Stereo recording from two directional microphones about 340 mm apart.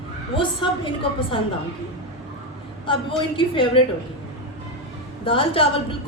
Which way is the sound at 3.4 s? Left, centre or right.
Centre.